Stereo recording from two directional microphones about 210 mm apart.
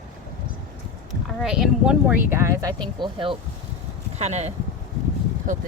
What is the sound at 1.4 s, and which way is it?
Speech, 5° right (ahead or behind).